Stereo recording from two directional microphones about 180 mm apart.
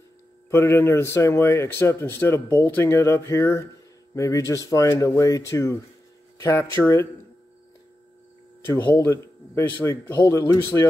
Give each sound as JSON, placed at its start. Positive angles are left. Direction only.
{"t": 0.5, "sound": "a man's voice", "side_deg": 15}
{"t": 8.9, "sound": "a man's voice", "side_deg": 10}